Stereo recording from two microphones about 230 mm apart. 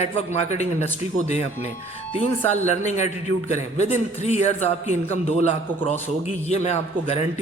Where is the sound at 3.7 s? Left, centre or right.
Left.